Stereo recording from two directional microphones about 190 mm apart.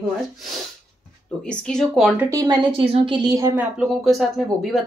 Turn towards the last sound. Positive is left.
turn(degrees=0)  # may be behind; listen again after turning